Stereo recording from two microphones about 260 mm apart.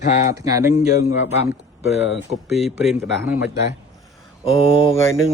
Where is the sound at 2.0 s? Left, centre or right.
Left.